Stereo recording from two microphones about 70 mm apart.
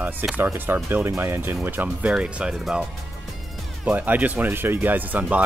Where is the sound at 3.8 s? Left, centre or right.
Right.